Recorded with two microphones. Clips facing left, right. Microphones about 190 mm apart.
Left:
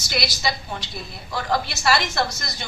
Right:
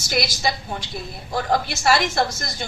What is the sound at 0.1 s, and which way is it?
A woman's voice, 50° right (ahead or behind).